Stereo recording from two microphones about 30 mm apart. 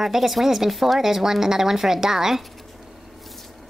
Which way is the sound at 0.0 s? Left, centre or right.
Centre.